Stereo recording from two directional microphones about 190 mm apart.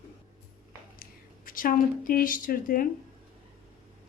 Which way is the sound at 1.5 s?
45° left (ahead or behind).